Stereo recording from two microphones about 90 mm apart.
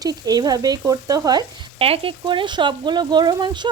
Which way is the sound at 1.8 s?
90° right.